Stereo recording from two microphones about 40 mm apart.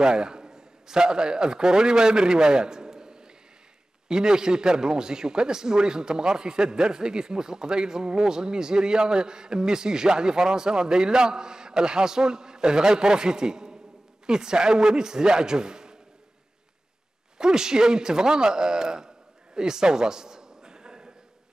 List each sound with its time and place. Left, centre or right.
0.0 s a man's voice: centre
17.4 s a man's voice: centre